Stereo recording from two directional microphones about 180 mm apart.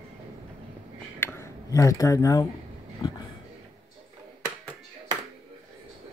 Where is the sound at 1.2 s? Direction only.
15° left (ahead or behind).